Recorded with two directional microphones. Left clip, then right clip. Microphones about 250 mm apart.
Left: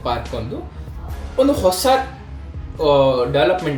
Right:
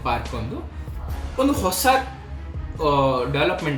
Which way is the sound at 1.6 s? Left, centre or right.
Centre.